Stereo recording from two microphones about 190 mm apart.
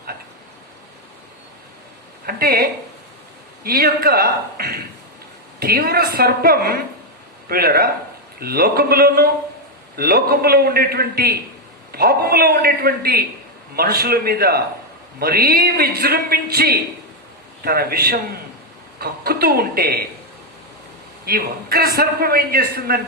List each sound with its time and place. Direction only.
2.2 s a man's voice: 50° right (ahead or behind)
21.2 s a man's voice: 55° right (ahead or behind)